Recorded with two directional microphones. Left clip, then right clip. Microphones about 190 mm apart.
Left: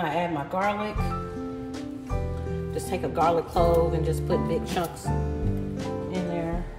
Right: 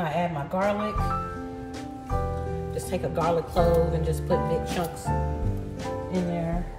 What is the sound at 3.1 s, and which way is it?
Speech, centre (ahead or behind).